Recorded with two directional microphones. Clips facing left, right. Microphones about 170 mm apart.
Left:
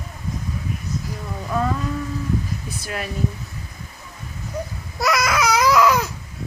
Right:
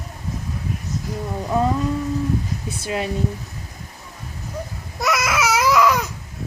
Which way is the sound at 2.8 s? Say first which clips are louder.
Right 6 dB; 25° right (ahead or behind).